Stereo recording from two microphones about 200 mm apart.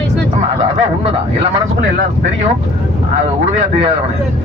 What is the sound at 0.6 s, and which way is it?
Honk, 30° right (ahead or behind).